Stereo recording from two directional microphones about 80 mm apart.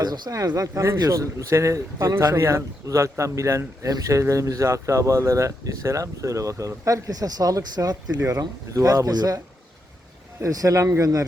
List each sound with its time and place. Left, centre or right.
0.0 s speech: right
10.4 s speech: right